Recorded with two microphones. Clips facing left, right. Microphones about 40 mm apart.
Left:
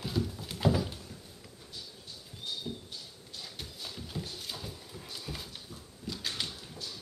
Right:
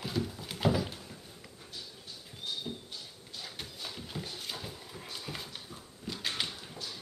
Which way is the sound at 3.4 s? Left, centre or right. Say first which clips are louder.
Right 1 dB; centre.